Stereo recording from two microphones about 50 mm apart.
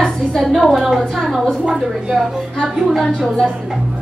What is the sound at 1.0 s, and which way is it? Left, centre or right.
Speech, centre.